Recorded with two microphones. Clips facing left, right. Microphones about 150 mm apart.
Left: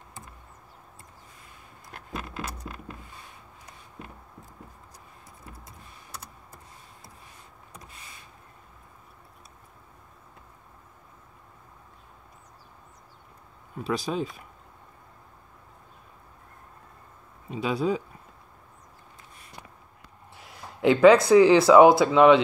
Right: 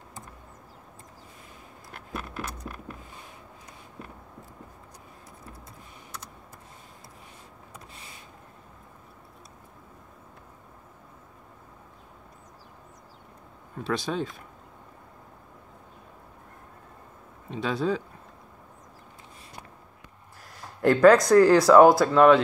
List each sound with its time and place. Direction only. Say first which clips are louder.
13.7 s speech: even; centre (ahead or behind)
17.5 s speech: left 1 dB; 5° left (ahead or behind)
20.3 s speech: left 1 dB; centre (ahead or behind)